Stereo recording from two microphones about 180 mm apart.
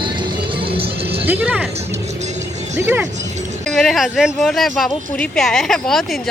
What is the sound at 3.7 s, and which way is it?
Speech, centre (ahead or behind).